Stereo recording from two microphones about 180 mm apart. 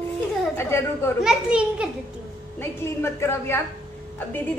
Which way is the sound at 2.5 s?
15° left (ahead or behind).